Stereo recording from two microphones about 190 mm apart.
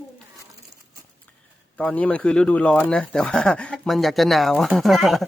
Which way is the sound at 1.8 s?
5° left (ahead or behind).